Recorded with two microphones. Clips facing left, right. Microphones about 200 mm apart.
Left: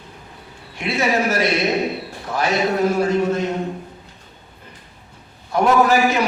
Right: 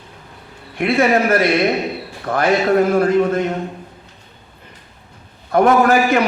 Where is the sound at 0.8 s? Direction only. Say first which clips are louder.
Right 5 dB; 55° right (ahead or behind).